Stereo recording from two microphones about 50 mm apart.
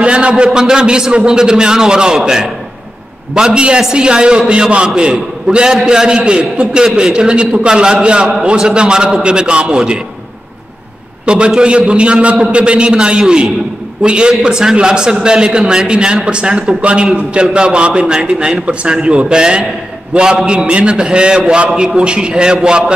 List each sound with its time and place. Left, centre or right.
0.0 s a man's voice: right
11.2 s a man's voice: right